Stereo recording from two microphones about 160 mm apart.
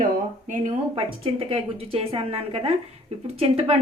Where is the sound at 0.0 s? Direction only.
50° right (ahead or behind).